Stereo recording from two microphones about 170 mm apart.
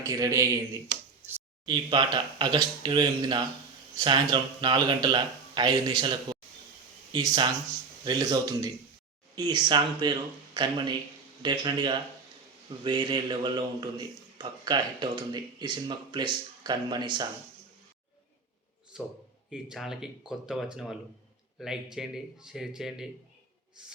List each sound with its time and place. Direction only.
0.0 s speech: 20° right (ahead or behind)
1.6 s speech: 25° right (ahead or behind)
18.9 s a man's voice: 5° right (ahead or behind)